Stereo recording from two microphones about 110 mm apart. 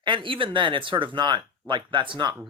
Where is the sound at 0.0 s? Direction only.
50° right (ahead or behind).